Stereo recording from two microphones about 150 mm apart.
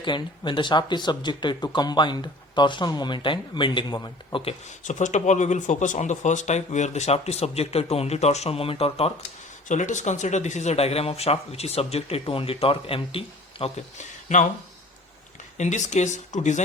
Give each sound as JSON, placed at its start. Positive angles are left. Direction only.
{"t": 0.0, "sound": "speech", "side_deg": 30}
{"t": 4.8, "sound": "speech", "side_deg": 55}
{"t": 9.6, "sound": "speech", "side_deg": 55}
{"t": 15.5, "sound": "speech", "side_deg": 55}